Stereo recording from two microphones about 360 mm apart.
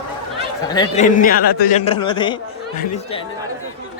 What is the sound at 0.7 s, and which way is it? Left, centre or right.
A man's voice, centre.